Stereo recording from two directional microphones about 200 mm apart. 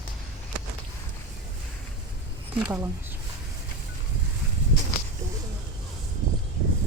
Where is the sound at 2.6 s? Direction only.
10° right (ahead or behind).